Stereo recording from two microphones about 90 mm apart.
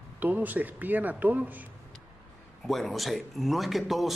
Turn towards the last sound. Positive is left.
turn(degrees=0)  # may be behind; listen again after turning